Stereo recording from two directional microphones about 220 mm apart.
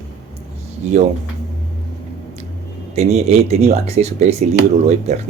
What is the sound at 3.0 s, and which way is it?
Speech, 30° right (ahead or behind).